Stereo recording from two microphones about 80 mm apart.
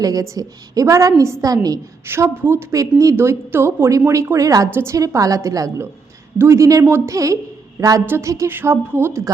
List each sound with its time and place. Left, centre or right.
0.0 s a woman's voice: right
2.0 s a woman's voice: right
2.7 s a woman's voice: right
4.7 s a woman's voice: right
4.9 s a woman's voice: right
6.7 s a woman's voice: right
8.4 s a woman's voice: right